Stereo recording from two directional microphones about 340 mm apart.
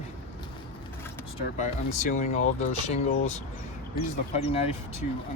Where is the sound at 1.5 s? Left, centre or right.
Left.